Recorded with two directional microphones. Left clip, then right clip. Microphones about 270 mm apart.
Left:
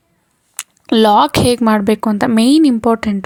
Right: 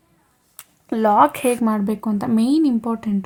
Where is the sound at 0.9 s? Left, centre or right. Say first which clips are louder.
Left 5 dB; left.